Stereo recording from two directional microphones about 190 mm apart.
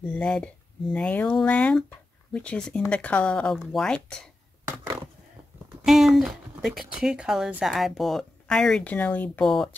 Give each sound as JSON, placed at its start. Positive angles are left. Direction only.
{"t": 0.1, "sound": "speech", "side_deg": 5}
{"t": 5.9, "sound": "speech", "side_deg": 0}